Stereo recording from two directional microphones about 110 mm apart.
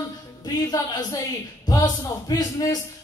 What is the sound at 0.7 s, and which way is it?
A man's voice, 35° left (ahead or behind).